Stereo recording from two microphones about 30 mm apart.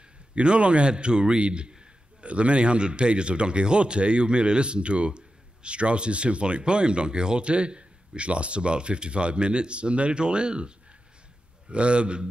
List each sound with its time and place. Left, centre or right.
0.3 s speech: right
11.7 s speech: right